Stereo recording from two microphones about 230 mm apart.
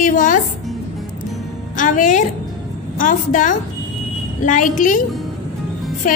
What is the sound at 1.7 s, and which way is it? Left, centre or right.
A woman's voice, left.